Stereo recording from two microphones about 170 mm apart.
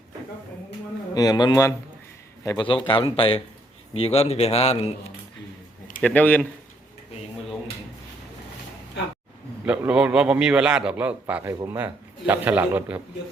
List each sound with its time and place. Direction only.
1.1 s speech: 20° left (ahead or behind)
6.0 s speech: 10° left (ahead or behind)
9.6 s a man's voice: 10° right (ahead or behind)